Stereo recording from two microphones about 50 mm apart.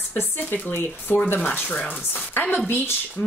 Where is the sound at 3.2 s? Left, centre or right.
Left.